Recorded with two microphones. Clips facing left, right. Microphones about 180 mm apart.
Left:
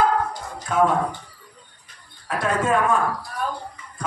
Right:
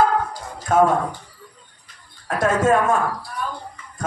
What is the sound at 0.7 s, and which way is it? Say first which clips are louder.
Speech: right 4 dB; 45° right (ahead or behind).